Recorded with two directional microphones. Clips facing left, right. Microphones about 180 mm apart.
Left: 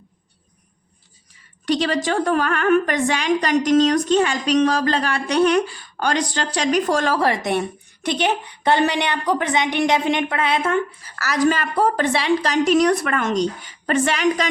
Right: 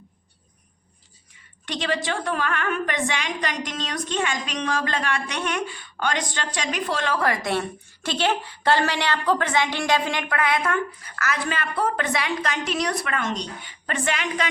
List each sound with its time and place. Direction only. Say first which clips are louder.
1.6 s a woman's voice: left 6 dB; 40° left (ahead or behind)
7.2 s a woman's voice: left 4 dB; 25° left (ahead or behind)
11.2 s a woman's voice: left 8 dB; 40° left (ahead or behind)